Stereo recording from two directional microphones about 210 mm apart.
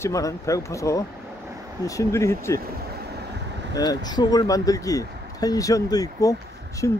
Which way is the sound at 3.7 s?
20° left (ahead or behind).